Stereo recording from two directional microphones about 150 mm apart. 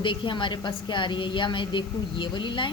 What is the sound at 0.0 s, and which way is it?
A woman's voice, 35° left (ahead or behind).